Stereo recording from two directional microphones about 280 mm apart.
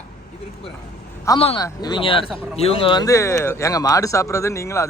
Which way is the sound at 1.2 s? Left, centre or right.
Centre.